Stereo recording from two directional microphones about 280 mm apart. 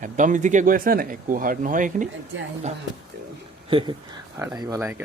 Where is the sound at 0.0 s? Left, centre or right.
Right.